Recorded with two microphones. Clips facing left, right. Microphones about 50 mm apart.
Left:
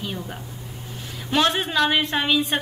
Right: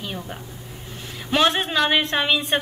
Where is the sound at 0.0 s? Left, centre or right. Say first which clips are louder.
Left 1 dB; centre.